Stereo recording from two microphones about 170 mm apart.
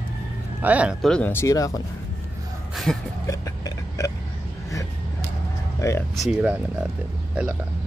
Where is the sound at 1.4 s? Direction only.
20° left (ahead or behind).